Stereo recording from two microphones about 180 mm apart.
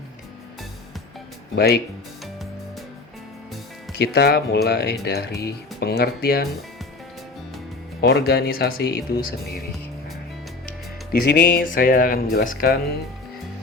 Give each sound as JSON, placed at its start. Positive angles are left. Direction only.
{"t": 1.5, "sound": "speech", "side_deg": 60}
{"t": 3.9, "sound": "speech", "side_deg": 60}
{"t": 8.0, "sound": "speech", "side_deg": 65}
{"t": 11.1, "sound": "speech", "side_deg": 65}
{"t": 11.6, "sound": "speech", "side_deg": 50}